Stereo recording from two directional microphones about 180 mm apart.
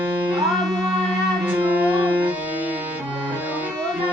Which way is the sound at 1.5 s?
10° right (ahead or behind).